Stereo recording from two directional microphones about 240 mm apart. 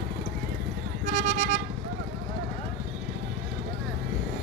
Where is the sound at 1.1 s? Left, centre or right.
Right.